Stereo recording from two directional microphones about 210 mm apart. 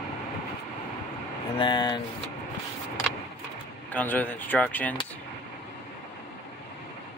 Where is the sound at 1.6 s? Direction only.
20° left (ahead or behind).